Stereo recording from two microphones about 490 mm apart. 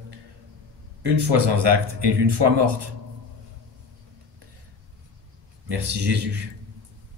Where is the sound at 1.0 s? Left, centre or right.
Right.